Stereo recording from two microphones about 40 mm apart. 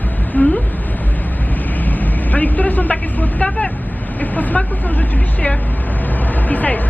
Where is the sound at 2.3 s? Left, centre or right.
Left.